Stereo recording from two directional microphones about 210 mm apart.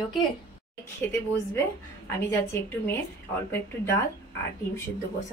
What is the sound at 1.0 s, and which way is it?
Speech, 10° left (ahead or behind).